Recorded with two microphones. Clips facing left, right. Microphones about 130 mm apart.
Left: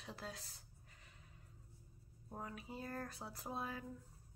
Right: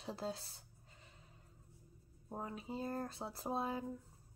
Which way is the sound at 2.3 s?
25° right (ahead or behind).